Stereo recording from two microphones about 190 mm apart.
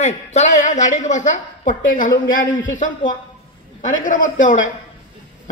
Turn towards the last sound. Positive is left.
turn(degrees=45)  # may be behind; listen again after turning